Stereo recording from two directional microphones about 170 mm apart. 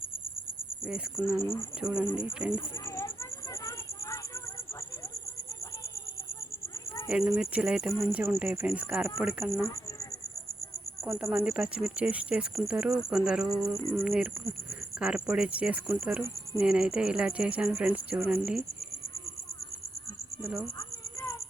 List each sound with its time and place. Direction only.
0.9 s speech: 5° right (ahead or behind)
1.4 s speech: 15° left (ahead or behind)
1.8 s speech: 5° right (ahead or behind)
2.5 s a sound: 15° left (ahead or behind)
7.1 s speech: 5° right (ahead or behind)
8.0 s speech: 15° right (ahead or behind)
11.0 s speech: 5° right (ahead or behind)
20.4 s speech: 5° right (ahead or behind)
20.7 s a sound: 15° left (ahead or behind)